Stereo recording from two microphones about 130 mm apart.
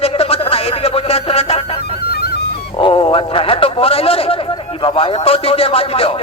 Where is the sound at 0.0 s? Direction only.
50° left (ahead or behind).